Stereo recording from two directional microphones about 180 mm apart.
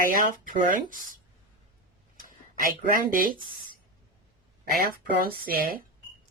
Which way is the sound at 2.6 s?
50° right (ahead or behind).